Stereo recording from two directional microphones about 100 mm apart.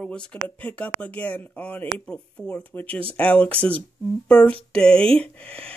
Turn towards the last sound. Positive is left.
turn(degrees=10)  # may be behind; listen again after turning